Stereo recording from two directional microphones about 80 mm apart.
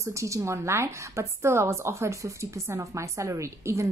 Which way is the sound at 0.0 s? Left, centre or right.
Right.